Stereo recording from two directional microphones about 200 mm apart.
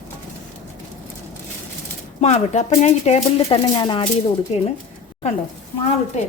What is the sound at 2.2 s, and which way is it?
Speech, 35° left (ahead or behind).